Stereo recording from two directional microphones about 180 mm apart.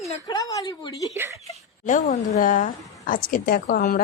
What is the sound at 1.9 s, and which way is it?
A woman's voice, 45° left (ahead or behind).